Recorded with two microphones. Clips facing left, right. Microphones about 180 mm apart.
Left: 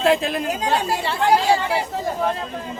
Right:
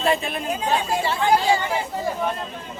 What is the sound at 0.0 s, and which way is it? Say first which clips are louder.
Speech: left 4 dB; 90° left.